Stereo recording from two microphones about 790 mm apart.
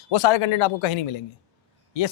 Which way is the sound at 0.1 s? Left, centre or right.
Left.